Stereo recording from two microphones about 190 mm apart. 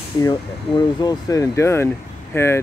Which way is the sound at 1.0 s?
15° left (ahead or behind).